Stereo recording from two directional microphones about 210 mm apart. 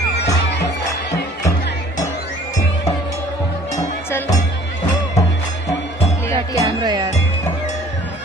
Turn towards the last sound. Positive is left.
turn(degrees=-20)  # may be behind; listen again after turning